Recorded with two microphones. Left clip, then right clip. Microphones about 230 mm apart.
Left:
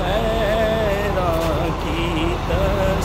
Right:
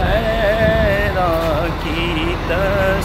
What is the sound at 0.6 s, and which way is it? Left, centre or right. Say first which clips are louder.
Music: right 4 dB; centre.